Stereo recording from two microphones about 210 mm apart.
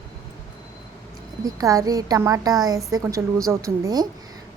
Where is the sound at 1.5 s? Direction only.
15° right (ahead or behind).